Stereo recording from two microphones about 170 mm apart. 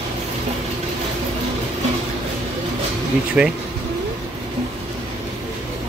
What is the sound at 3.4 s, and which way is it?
Speech, 5° right (ahead or behind).